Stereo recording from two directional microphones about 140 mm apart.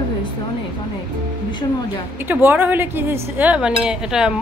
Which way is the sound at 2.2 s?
15° right (ahead or behind).